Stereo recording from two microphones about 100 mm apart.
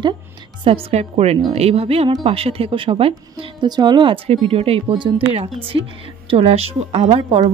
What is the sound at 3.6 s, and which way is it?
Speech, 45° right (ahead or behind).